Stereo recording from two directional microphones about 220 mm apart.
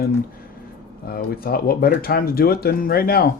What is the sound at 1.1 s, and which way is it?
Speech, 45° left (ahead or behind).